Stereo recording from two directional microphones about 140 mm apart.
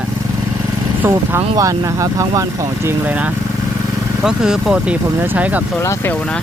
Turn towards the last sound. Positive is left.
turn(degrees=-10)  # may be behind; listen again after turning